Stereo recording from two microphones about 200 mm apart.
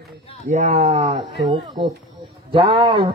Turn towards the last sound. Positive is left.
turn(degrees=-25)  # may be behind; listen again after turning